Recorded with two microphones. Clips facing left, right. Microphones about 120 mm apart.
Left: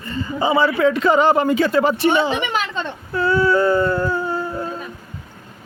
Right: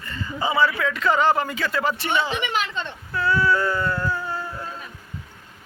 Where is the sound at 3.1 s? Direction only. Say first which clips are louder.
Left 5 dB; 25° left (ahead or behind).